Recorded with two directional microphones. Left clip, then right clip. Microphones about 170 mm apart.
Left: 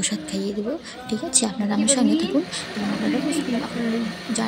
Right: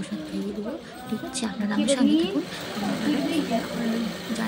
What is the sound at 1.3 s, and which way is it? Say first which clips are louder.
Speech: left 6 dB; 20° left (ahead or behind).